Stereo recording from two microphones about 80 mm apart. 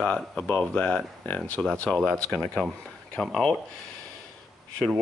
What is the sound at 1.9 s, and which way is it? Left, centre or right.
Speech, centre.